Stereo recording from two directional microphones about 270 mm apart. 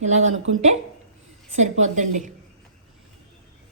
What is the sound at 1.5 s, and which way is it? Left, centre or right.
Speech, right.